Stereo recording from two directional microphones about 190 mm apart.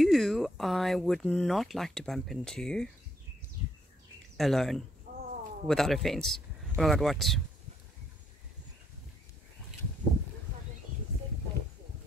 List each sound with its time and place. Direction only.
0.0 s speech: centre (ahead or behind)
4.4 s speech: centre (ahead or behind)
5.1 s a sound: 45° right (ahead or behind)
5.7 s speech: centre (ahead or behind)